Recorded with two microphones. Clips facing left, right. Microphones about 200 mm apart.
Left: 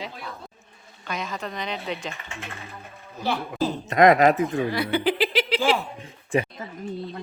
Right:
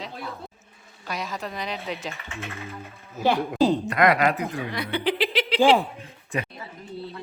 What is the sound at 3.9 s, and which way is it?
Speech, 20° left (ahead or behind).